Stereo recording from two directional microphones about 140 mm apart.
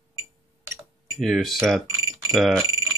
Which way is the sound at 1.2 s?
Centre (ahead or behind).